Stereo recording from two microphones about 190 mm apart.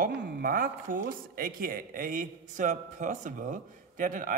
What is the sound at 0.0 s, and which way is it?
A woman's voice, 50° right (ahead or behind).